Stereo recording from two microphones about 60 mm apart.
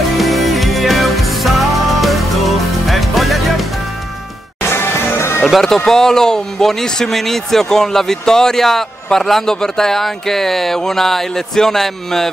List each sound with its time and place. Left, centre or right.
0.2 s music: centre
4.6 s music: left
5.5 s speech: centre